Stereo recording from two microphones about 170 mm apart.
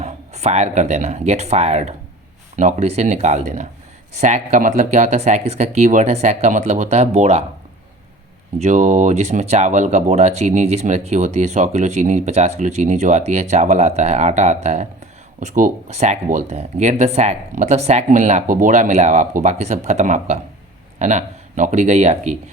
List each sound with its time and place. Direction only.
0.0 s speech: 40° right (ahead or behind)
8.5 s speech: 40° right (ahead or behind)